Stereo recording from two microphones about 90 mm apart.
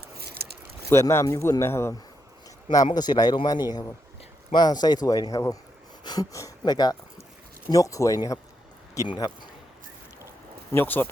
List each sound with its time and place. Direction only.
0.9 s speech: 30° left (ahead or behind)
2.7 s speech: 50° left (ahead or behind)
6.0 s a sound: 50° left (ahead or behind)
6.3 s speech: 45° left (ahead or behind)
7.7 s speech: 40° left (ahead or behind)
9.1 s speech: 55° left (ahead or behind)
10.7 s speech: 25° left (ahead or behind)